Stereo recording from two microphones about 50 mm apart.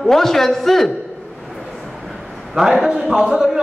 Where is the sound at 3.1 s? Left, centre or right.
Centre.